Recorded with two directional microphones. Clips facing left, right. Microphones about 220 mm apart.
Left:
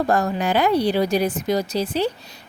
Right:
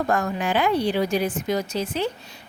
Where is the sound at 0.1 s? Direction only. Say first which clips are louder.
Left 3 dB; 35° left (ahead or behind).